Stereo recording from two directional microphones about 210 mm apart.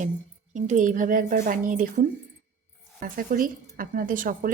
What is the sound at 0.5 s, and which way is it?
Speech, 35° right (ahead or behind).